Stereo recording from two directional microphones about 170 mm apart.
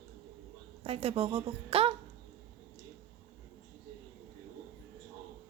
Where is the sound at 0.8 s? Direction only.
35° right (ahead or behind).